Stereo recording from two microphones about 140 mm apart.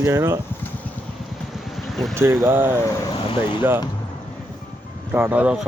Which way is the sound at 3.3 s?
35° left (ahead or behind).